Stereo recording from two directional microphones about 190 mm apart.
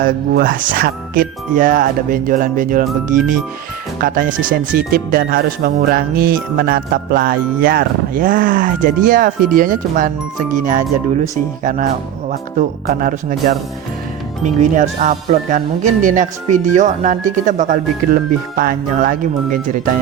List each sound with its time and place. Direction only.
0.0 s speech: 45° right (ahead or behind)
14.4 s speech: 40° right (ahead or behind)